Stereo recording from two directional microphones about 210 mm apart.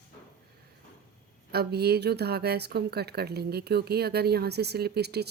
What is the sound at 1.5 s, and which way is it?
Speech, 50° right (ahead or behind).